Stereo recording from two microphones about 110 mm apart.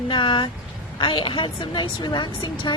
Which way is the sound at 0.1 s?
50° left (ahead or behind).